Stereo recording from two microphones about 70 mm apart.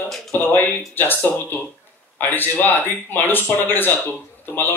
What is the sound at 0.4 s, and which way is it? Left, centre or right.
A man's voice, left.